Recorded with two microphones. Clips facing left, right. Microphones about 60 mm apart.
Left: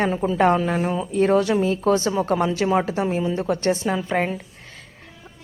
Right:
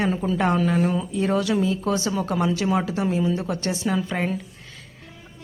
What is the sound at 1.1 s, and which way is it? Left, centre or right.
Speech, left.